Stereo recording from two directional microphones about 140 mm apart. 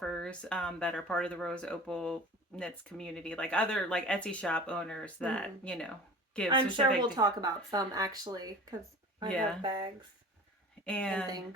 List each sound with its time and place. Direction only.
0.0 s speech: 5° left (ahead or behind)
6.5 s speech: 40° right (ahead or behind)
9.3 s speech: 5° left (ahead or behind)
9.6 s speech: 35° right (ahead or behind)
10.8 s speech: 10° left (ahead or behind)